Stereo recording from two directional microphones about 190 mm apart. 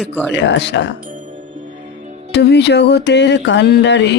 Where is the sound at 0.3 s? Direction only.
70° left (ahead or behind).